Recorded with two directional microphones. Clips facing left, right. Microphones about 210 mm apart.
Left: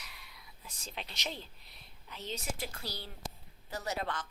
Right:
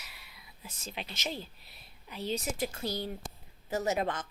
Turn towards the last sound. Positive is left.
turn(degrees=-20)  # may be behind; listen again after turning